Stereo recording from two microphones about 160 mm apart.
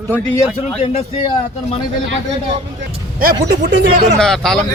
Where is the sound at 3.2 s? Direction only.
65° right (ahead or behind).